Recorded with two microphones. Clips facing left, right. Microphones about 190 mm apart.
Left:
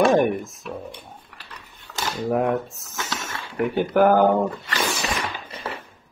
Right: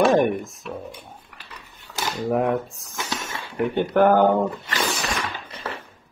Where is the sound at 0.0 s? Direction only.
Centre (ahead or behind).